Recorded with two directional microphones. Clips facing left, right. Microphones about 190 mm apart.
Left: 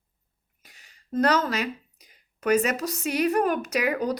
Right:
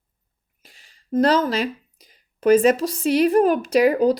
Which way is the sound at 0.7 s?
30° right (ahead or behind).